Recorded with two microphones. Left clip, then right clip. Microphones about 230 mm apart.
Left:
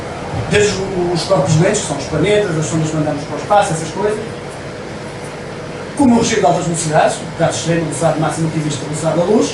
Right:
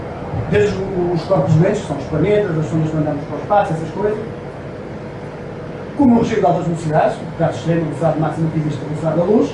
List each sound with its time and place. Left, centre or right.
0.5 s a man's voice: centre
6.1 s speech: centre
9.0 s speech: right